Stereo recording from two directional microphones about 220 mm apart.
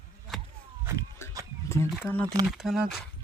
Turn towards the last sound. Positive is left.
turn(degrees=0)  # may be behind; listen again after turning